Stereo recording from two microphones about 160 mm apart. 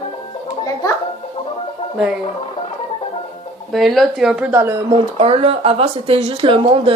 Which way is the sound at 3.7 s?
Centre (ahead or behind).